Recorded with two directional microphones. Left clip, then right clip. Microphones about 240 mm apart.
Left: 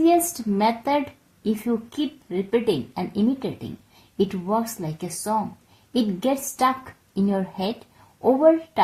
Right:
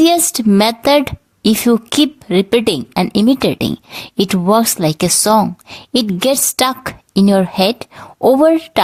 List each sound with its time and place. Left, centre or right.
0.6 s a woman's voice: right